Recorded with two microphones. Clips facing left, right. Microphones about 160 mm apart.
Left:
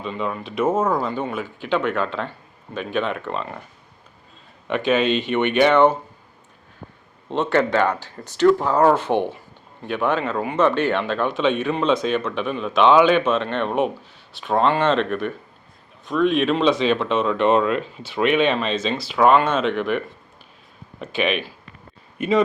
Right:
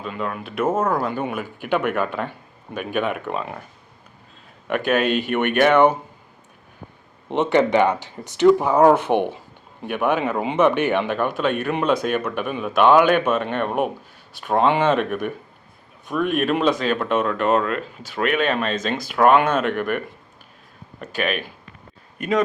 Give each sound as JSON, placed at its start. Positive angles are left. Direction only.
{"t": 0.0, "sound": "speech", "side_deg": -5}
{"t": 4.7, "sound": "speech", "side_deg": -10}
{"t": 7.3, "sound": "speech", "side_deg": -20}